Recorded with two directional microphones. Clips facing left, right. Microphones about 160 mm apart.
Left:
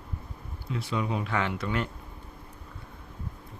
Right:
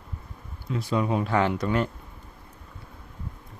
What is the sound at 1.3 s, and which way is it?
Speech, 35° right (ahead or behind).